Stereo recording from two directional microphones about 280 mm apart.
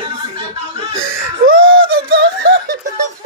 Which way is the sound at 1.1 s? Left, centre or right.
Right.